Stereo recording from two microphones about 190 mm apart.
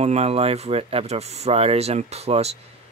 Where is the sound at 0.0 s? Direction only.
35° right (ahead or behind).